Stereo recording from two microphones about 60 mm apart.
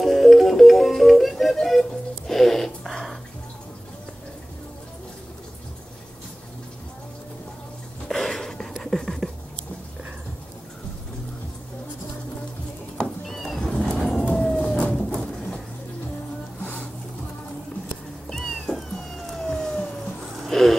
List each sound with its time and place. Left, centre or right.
0.0 s music: centre
8.1 s a sound: centre
12.9 s music: centre
13.9 s vehicle: centre
14.3 s siren: centre
14.8 s bird: centre
18.3 s cat: centre
20.3 s a sound: centre